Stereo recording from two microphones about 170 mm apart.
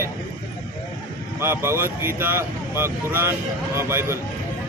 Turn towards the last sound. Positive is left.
turn(degrees=-15)  # may be behind; listen again after turning